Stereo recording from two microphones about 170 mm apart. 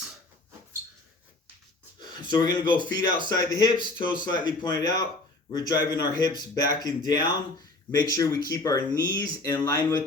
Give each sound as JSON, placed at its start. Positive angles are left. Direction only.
{"t": 2.2, "sound": "speech", "side_deg": 25}